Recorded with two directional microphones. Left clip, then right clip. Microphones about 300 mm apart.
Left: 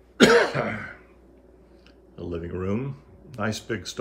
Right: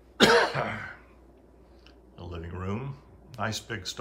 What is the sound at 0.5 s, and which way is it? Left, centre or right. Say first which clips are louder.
Throat clearing: left 3 dB; centre.